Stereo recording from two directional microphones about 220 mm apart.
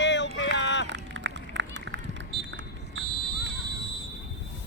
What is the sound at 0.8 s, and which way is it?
Run, 55° right (ahead or behind).